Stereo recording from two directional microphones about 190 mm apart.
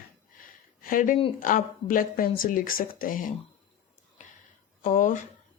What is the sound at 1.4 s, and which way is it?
A woman's voice, 45° left (ahead or behind).